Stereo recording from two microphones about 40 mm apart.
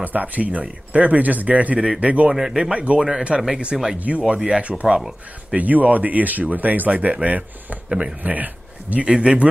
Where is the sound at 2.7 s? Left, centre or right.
Right.